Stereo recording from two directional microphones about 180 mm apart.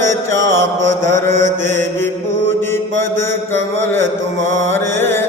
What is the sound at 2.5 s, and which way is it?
Mantra, 15° left (ahead or behind).